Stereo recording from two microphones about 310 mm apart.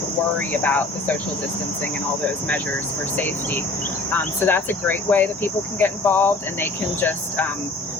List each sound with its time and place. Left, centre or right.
0.3 s cricket: centre
4.1 s speech: centre